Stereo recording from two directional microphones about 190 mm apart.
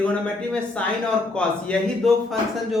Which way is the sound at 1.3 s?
5° left (ahead or behind).